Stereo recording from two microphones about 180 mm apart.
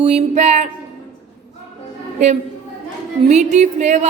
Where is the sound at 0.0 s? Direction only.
40° right (ahead or behind).